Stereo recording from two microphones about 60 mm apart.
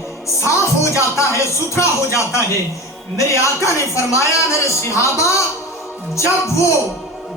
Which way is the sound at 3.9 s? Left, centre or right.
Left.